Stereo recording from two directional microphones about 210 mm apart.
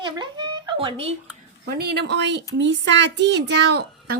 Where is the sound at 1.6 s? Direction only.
50° right (ahead or behind).